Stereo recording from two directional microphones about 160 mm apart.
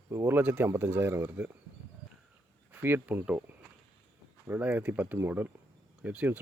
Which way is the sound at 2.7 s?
10° right (ahead or behind).